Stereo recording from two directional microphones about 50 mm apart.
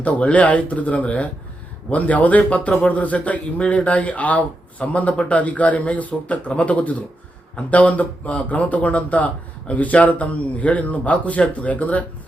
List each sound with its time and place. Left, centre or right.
0.0 s speech: left